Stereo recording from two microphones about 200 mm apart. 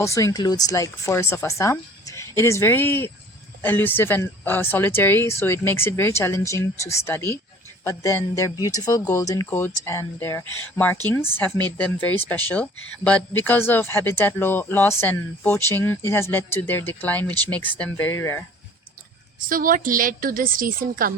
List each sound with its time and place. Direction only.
0.0 s speech: 15° left (ahead or behind)
19.4 s a woman's voice: 45° right (ahead or behind)